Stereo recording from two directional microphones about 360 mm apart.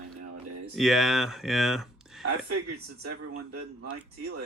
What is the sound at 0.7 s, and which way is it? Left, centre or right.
Speech, centre.